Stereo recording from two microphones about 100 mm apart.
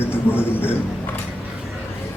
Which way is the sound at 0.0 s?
20° left (ahead or behind).